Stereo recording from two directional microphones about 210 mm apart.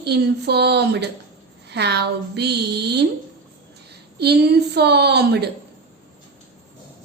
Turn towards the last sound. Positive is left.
turn(degrees=-50)  # may be behind; listen again after turning